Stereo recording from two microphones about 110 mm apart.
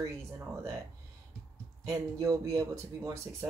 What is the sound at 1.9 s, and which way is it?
Speech, 30° right (ahead or behind).